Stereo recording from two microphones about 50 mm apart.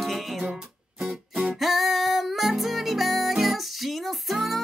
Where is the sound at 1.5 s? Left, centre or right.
Centre.